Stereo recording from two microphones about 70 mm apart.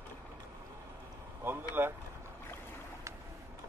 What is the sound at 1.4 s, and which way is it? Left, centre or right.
Vehicle, right.